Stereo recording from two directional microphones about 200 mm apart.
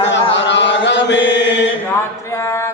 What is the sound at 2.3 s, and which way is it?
A capella, 15° left (ahead or behind).